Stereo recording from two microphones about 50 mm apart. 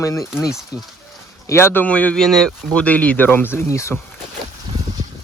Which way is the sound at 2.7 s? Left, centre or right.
Left.